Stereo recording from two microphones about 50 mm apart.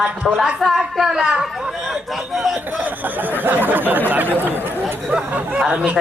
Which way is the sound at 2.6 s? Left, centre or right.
Right.